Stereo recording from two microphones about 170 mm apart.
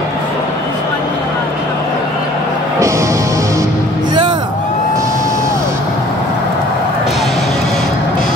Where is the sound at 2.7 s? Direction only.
15° right (ahead or behind).